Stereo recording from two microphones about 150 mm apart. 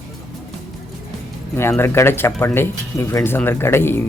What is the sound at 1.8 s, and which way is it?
Speech, 15° left (ahead or behind).